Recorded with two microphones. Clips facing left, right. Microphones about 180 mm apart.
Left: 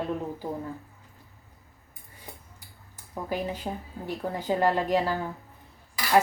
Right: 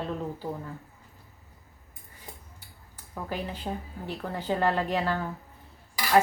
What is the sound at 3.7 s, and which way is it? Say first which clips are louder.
Speech: left 1 dB; 15° left (ahead or behind).